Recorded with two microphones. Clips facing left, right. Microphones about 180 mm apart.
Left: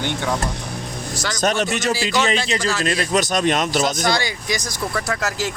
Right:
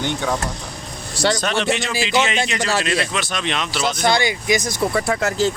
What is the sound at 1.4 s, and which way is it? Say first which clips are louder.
A man's voice: left 1 dB; 45° left (ahead or behind).